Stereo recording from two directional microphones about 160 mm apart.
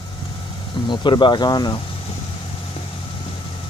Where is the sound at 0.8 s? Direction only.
30° left (ahead or behind).